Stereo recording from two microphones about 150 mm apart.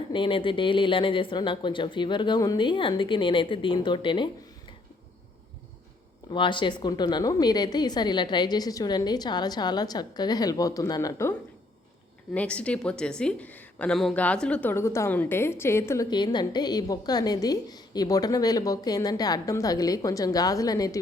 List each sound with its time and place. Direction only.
0.1 s speech: 35° left (ahead or behind)
6.3 s a woman's voice: 35° left (ahead or behind)
12.3 s a woman's voice: 10° left (ahead or behind)
16.0 s a woman's voice: 30° left (ahead or behind)